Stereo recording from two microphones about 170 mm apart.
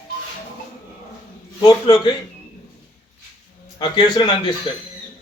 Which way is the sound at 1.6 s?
25° left (ahead or behind).